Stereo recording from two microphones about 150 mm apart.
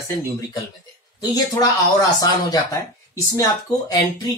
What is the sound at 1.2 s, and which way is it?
Speech, 25° left (ahead or behind).